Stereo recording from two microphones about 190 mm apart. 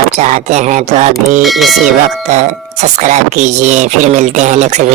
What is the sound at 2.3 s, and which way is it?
Speech, 35° right (ahead or behind).